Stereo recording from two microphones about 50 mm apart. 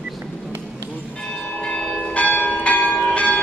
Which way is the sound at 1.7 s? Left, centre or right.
Left.